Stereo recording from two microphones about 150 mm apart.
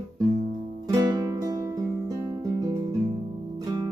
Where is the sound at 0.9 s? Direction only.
25° right (ahead or behind).